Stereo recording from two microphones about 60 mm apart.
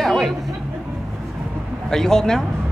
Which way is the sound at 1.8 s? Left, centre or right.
Centre.